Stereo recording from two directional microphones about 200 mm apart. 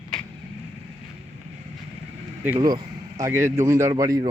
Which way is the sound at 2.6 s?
20° right (ahead or behind).